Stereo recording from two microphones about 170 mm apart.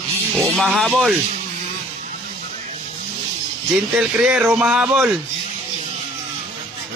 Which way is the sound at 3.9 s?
5° right (ahead or behind).